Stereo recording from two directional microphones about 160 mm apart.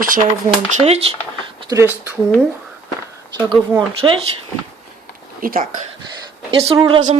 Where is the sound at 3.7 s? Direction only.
15° right (ahead or behind).